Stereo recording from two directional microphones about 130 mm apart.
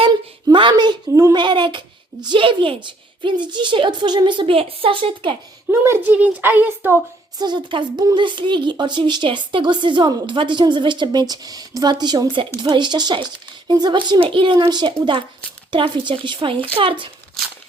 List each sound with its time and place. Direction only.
0.4 s speech: 35° right (ahead or behind)
5.7 s a woman's voice: 20° right (ahead or behind)
7.3 s speech: 35° right (ahead or behind)